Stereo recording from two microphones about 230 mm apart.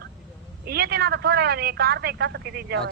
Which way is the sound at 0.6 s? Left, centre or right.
Right.